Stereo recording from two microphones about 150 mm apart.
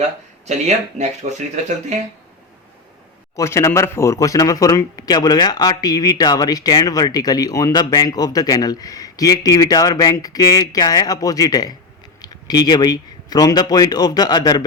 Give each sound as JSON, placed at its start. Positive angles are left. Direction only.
{"t": 0.4, "sound": "speech", "side_deg": -50}
{"t": 3.3, "sound": "speech", "side_deg": 20}